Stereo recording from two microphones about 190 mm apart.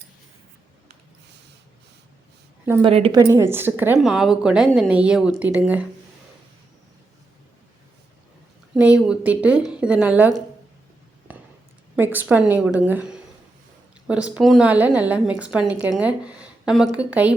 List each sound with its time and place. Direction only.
2.8 s a woman's voice: 30° right (ahead or behind)
3.2 s a woman's voice: 15° right (ahead or behind)
8.7 s a woman's voice: 5° right (ahead or behind)
11.9 s a woman's voice: 10° right (ahead or behind)